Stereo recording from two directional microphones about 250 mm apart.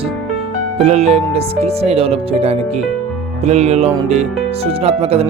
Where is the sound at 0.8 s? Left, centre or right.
Right.